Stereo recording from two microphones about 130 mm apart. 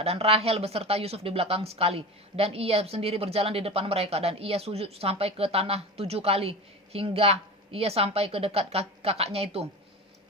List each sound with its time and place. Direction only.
0.0 s speech: 50° right (ahead or behind)